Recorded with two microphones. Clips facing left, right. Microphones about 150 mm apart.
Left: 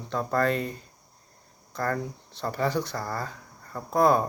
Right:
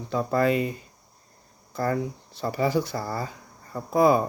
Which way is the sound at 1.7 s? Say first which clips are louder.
Right 3 dB; 10° right (ahead or behind).